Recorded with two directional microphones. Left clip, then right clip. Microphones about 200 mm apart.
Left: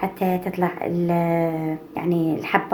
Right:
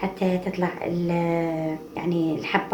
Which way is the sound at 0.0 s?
50° left (ahead or behind).